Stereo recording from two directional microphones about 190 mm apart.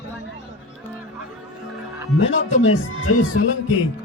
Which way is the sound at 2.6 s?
90° left.